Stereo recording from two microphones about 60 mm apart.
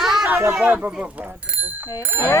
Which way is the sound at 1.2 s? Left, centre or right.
Right.